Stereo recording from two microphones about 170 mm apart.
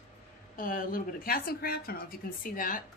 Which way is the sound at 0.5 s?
55° left (ahead or behind).